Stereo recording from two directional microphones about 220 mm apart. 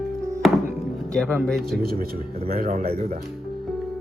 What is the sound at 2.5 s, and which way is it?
Speech, 40° right (ahead or behind).